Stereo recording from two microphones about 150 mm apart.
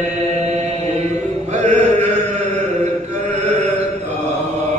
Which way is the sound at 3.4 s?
50° right (ahead or behind).